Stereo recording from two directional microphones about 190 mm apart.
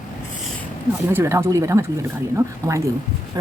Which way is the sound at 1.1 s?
15° right (ahead or behind).